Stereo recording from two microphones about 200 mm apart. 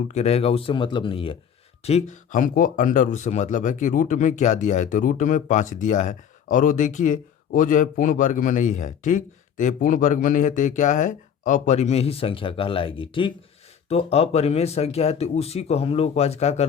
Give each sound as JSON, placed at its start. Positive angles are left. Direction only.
{"t": 0.1, "sound": "speech", "side_deg": 30}